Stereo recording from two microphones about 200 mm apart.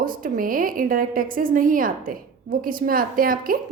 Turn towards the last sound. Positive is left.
turn(degrees=-45)  # may be behind; listen again after turning